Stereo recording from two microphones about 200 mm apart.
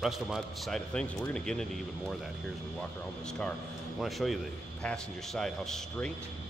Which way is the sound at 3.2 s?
5° left (ahead or behind).